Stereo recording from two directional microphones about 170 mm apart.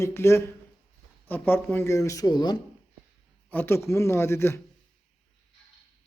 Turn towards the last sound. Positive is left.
turn(degrees=15)  # may be behind; listen again after turning